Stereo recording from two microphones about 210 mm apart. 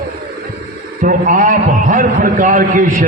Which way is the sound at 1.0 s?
40° right (ahead or behind).